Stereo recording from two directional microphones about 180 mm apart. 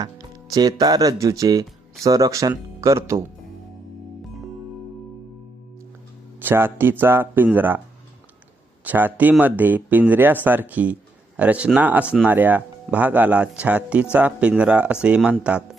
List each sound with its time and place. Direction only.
0.0 s speech: 20° right (ahead or behind)
6.4 s a man's voice: 10° right (ahead or behind)
8.8 s speech: 10° right (ahead or behind)